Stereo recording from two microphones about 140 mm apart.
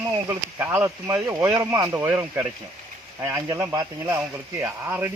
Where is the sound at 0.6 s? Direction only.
15° right (ahead or behind).